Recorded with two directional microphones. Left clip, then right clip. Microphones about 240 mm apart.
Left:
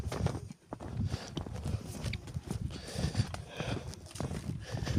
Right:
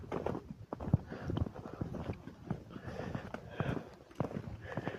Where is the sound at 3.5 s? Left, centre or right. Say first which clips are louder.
Even; left.